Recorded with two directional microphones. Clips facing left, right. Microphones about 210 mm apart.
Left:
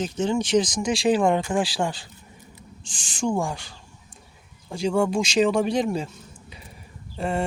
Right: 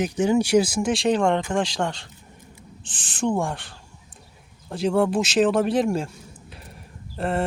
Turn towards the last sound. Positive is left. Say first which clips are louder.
# right 1 dB
turn(degrees=0)  # may be behind; listen again after turning